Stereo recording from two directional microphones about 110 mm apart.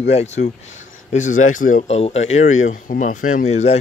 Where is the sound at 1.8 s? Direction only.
75° left (ahead or behind).